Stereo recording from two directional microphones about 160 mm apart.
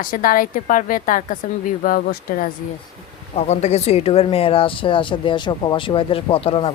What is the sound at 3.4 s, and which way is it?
Speech, 45° left (ahead or behind).